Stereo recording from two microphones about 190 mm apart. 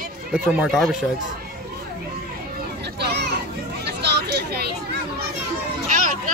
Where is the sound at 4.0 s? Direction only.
60° right (ahead or behind).